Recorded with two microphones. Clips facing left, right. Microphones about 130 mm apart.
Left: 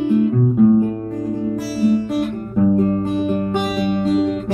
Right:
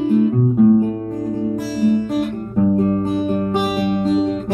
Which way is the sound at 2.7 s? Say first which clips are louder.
Even; 45° right (ahead or behind).